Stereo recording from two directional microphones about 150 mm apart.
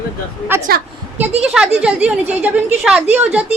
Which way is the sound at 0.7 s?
90° right.